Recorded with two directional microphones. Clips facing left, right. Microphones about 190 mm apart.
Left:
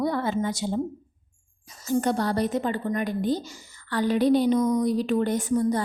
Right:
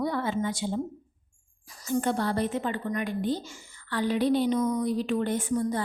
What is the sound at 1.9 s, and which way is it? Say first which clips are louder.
Speech: left 3 dB; 40° left (ahead or behind).